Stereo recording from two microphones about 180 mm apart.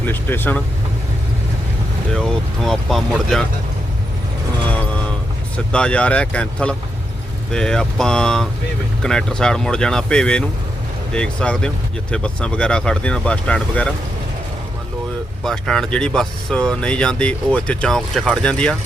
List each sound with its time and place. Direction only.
0.1 s speech: 10° left (ahead or behind)
2.1 s speech: centre (ahead or behind)
5.7 s speech: 5° left (ahead or behind)
15.4 s speech: centre (ahead or behind)